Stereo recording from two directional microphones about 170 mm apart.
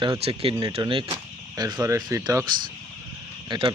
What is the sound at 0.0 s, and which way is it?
Speech, 30° right (ahead or behind).